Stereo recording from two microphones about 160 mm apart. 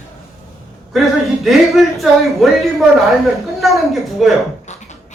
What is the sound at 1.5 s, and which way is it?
Speech, centre (ahead or behind).